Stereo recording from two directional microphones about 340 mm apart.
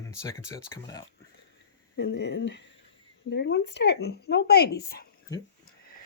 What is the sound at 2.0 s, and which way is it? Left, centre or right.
Speech, left.